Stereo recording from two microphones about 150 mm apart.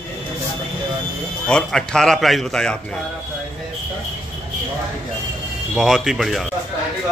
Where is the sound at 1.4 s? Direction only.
5° left (ahead or behind).